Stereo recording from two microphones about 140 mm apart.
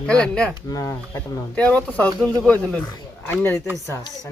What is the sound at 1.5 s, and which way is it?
Speech, 10° left (ahead or behind).